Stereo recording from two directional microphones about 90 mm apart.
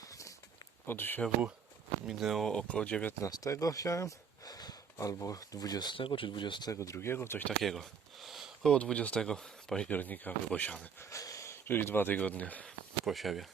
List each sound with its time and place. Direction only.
0.0 s a sound: 40° left (ahead or behind)
0.9 s speech: 25° left (ahead or behind)
2.0 s speech: centre (ahead or behind)
2.5 s speech: 10° left (ahead or behind)
3.2 s speech: 40° left (ahead or behind)
6.0 s speech: 70° left (ahead or behind)
6.7 s speech: 35° left (ahead or behind)
7.6 s speech: centre (ahead or behind)
8.7 s speech: 10° left (ahead or behind)
9.9 s speech: 20° left (ahead or behind)
11.1 s a sound: 40° left (ahead or behind)
11.7 s speech: 25° left (ahead or behind)
12.6 s speech: centre (ahead or behind)